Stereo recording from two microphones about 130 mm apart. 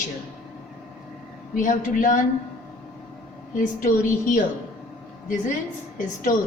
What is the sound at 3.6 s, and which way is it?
Speech, 90° left.